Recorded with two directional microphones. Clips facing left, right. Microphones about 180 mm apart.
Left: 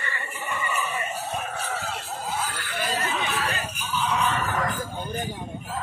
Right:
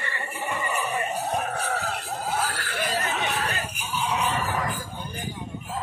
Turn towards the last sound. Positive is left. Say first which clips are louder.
# left 1 dB
turn(degrees=-15)  # may be behind; listen again after turning